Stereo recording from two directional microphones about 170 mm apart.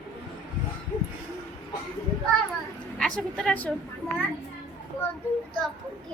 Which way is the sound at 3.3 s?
5° left (ahead or behind).